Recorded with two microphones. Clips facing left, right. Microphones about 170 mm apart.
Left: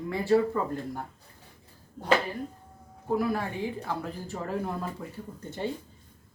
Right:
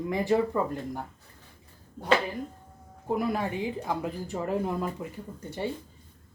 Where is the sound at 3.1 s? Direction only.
15° right (ahead or behind).